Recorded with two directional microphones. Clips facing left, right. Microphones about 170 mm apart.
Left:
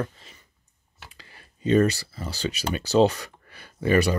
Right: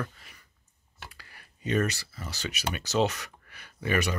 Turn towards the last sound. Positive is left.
turn(degrees=35)  # may be behind; listen again after turning